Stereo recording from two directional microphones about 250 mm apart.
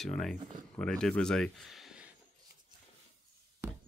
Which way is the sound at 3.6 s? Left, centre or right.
Centre.